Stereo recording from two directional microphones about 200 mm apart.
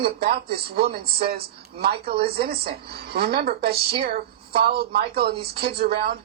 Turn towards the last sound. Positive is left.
turn(degrees=-50)  # may be behind; listen again after turning